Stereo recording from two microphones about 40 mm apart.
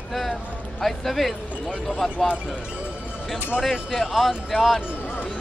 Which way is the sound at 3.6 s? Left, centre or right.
Centre.